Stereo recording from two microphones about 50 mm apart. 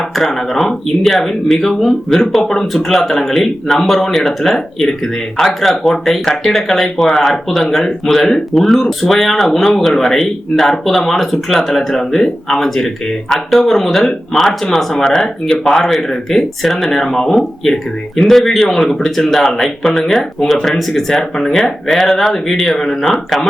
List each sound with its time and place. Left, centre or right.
0.2 s speech: centre